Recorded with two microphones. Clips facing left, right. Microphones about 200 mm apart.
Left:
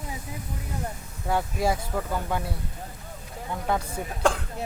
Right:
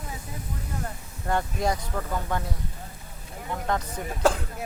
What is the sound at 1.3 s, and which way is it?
Speech, 5° left (ahead or behind).